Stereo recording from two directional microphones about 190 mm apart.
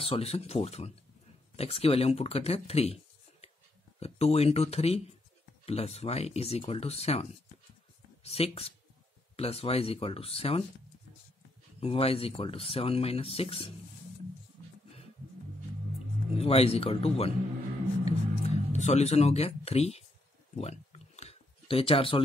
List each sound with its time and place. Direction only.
0.0 s speech: 30° left (ahead or behind)
11.8 s speech: 30° left (ahead or behind)
16.3 s speech: 30° left (ahead or behind)
18.0 s music: 35° left (ahead or behind)
20.5 s a sound: 35° left (ahead or behind)